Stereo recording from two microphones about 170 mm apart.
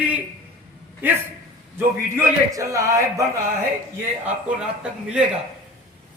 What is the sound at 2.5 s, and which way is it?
Speech, 20° right (ahead or behind).